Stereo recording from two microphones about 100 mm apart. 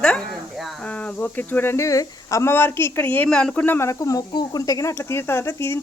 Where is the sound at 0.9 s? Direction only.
15° left (ahead or behind).